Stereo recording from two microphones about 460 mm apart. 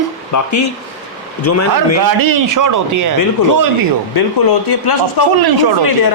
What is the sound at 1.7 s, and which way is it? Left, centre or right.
Speech, right.